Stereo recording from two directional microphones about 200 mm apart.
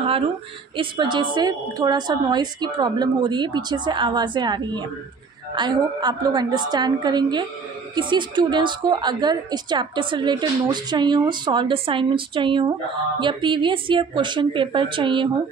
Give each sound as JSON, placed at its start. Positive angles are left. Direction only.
{"t": 0.7, "sound": "a woman's voice", "side_deg": -25}